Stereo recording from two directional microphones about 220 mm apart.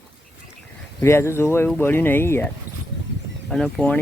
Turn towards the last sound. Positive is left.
turn(degrees=5)  # may be behind; listen again after turning